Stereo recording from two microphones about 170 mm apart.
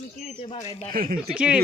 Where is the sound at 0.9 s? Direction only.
55° right (ahead or behind).